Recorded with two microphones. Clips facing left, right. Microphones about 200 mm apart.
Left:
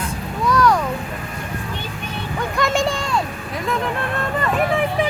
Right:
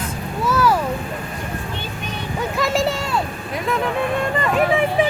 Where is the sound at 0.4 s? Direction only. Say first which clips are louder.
Left 1 dB; 5° right (ahead or behind).